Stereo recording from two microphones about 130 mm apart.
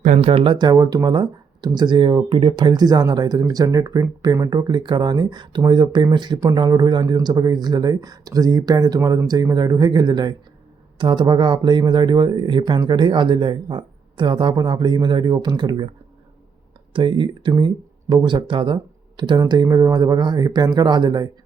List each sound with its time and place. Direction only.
0.0 s speech: 75° right (ahead or behind)
0.3 s speech: 40° right (ahead or behind)